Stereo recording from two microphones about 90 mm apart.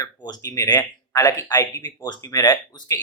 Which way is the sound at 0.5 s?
40° left (ahead or behind).